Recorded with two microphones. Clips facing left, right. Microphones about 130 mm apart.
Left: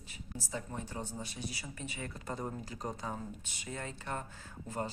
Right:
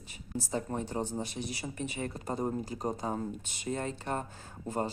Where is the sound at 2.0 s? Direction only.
35° right (ahead or behind).